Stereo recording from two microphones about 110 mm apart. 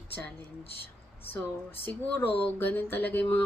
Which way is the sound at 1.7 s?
20° left (ahead or behind).